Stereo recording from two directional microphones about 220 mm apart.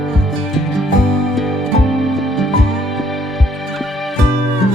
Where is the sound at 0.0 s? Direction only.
Centre (ahead or behind).